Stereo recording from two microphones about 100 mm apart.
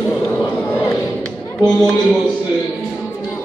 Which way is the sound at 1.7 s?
10° left (ahead or behind).